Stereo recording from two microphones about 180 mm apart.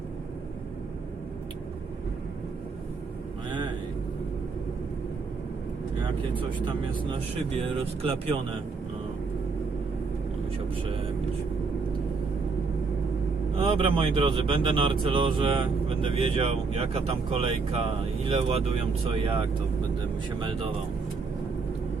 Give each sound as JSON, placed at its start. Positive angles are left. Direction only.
{"t": 13.6, "sound": "speech", "side_deg": -30}